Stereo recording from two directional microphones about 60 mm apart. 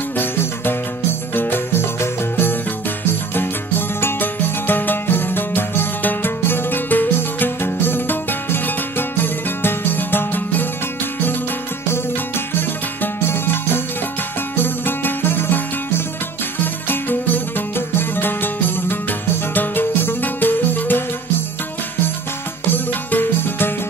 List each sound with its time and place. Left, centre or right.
0.2 s music: left
1.3 s jingle bell: left
3.1 s music: left
12.5 s music: left
22.7 s music: left